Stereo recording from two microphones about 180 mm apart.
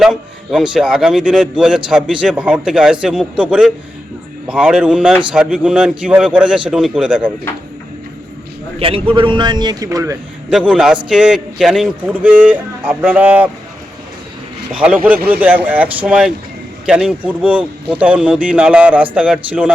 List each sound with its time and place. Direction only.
0.0 s a man's voice: centre (ahead or behind)
8.8 s a man's voice: 30° right (ahead or behind)
10.5 s a man's voice: 5° right (ahead or behind)
14.7 s a man's voice: 5° right (ahead or behind)